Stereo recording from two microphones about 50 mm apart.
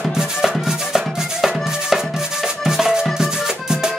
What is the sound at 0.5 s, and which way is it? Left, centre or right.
Music, centre.